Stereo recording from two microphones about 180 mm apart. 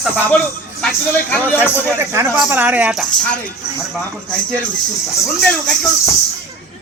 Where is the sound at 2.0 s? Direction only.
15° right (ahead or behind); by 3.3 s centre (ahead or behind).